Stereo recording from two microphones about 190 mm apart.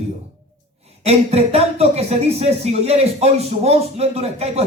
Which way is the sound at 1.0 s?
35° right (ahead or behind).